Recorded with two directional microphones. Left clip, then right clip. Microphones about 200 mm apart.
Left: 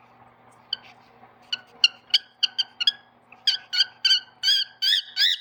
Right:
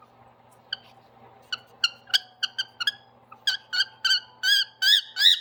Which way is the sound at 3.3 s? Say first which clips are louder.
Left 3 dB; 20° right (ahead or behind).